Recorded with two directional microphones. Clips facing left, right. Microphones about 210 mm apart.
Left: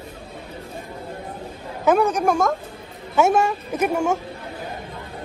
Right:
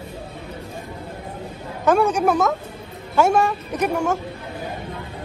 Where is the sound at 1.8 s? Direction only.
5° left (ahead or behind).